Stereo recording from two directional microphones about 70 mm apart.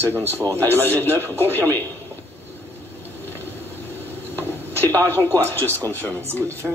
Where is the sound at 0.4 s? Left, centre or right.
Right.